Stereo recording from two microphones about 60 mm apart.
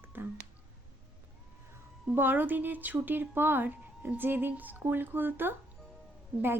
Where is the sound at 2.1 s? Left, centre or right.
Right.